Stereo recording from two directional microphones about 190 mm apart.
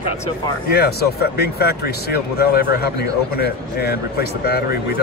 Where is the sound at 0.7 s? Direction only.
55° left (ahead or behind).